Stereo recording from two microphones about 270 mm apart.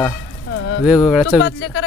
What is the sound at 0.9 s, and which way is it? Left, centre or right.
Speech, centre.